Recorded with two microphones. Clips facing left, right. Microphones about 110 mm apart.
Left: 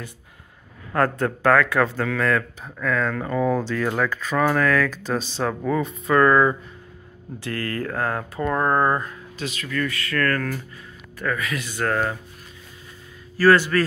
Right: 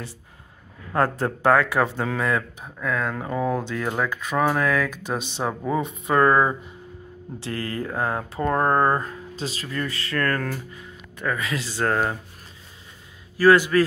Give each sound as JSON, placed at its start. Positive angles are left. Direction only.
{"t": 0.9, "sound": "speech", "side_deg": -25}
{"t": 7.3, "sound": "speech", "side_deg": -25}
{"t": 8.5, "sound": "speech", "side_deg": -35}
{"t": 13.4, "sound": "speech", "side_deg": -15}